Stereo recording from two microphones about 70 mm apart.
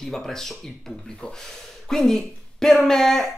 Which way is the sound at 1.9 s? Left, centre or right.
Centre.